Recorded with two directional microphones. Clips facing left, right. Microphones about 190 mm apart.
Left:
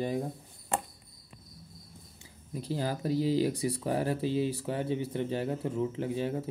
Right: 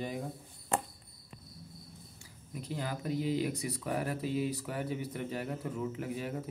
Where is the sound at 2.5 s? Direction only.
30° left (ahead or behind).